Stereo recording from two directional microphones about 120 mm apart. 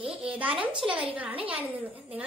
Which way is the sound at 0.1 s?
10° right (ahead or behind).